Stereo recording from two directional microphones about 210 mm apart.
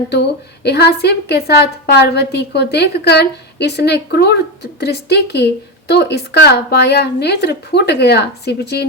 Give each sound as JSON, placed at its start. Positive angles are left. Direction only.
{"t": 0.1, "sound": "a woman's voice", "side_deg": 55}